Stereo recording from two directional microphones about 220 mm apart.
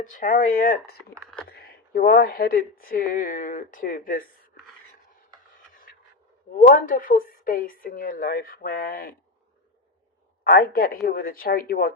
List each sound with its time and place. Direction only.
0.0 s speech: 40° left (ahead or behind)
5.9 s a sound: 45° left (ahead or behind)
6.6 s speech: 40° left (ahead or behind)
10.4 s speech: 45° left (ahead or behind)